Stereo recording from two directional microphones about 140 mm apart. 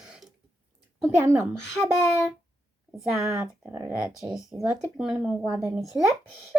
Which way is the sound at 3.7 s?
15° right (ahead or behind).